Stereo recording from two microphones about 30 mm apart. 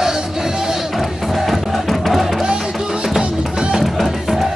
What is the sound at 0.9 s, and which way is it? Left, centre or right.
Music, centre.